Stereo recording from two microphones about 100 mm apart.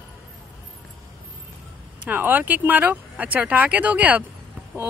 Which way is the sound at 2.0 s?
15° right (ahead or behind).